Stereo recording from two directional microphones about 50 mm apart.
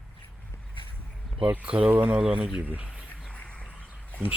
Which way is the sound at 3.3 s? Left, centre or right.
Left.